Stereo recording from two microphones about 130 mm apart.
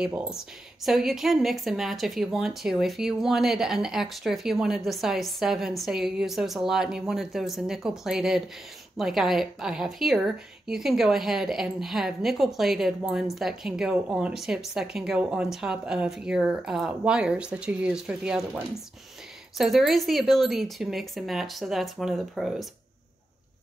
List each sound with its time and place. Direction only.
0.0 s a woman's voice: 5° right (ahead or behind)
19.6 s a woman's voice: centre (ahead or behind)